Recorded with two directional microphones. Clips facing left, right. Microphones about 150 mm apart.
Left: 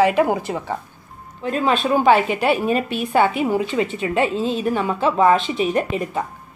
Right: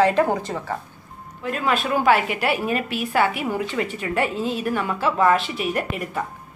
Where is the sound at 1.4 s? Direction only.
25° left (ahead or behind).